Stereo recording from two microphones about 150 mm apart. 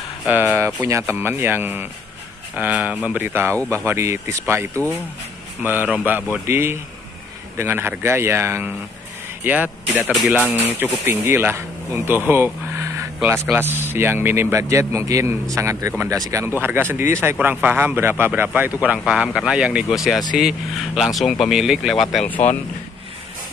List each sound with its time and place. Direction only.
0.3 s speech: 15° right (ahead or behind); by 22.2 s centre (ahead or behind)